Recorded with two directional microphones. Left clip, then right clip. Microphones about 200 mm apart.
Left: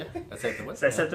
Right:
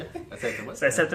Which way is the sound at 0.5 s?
50° right (ahead or behind).